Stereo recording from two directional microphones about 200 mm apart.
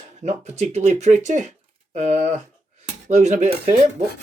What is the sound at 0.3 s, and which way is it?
Speech, 35° right (ahead or behind).